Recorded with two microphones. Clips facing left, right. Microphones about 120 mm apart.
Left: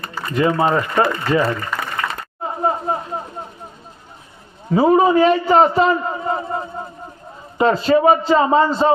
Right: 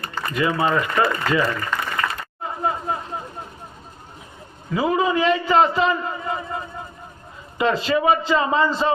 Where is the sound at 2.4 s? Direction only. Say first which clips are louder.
Left 4 dB; 30° left (ahead or behind).